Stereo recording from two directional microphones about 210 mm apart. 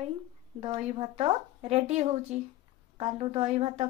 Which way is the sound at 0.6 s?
25° right (ahead or behind).